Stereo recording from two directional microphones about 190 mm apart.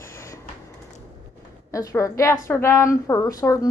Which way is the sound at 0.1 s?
15° left (ahead or behind).